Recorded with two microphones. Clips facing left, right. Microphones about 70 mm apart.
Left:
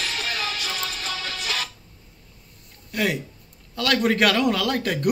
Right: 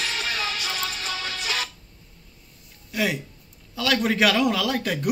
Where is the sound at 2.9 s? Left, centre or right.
Centre.